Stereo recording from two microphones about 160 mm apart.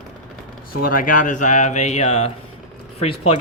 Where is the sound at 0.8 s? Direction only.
60° left (ahead or behind); by 3.4 s 35° left (ahead or behind).